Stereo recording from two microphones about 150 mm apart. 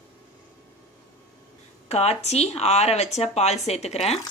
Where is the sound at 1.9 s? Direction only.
45° left (ahead or behind).